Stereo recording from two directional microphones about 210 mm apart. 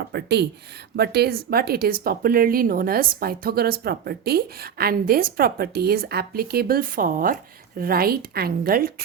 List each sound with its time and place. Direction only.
0.1 s a woman's voice: 50° right (ahead or behind)